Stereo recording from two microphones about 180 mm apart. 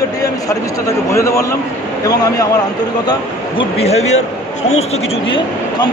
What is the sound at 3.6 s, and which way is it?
Speech, 35° left (ahead or behind).